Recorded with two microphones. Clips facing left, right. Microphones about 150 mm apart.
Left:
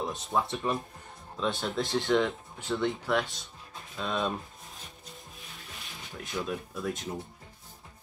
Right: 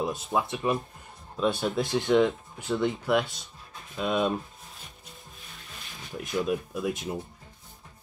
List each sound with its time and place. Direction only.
0.0 s speech: 10° right (ahead or behind)
6.1 s speech: 15° right (ahead or behind)